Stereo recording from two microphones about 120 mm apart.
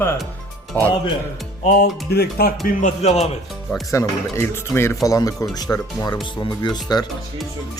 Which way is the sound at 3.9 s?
25° left (ahead or behind).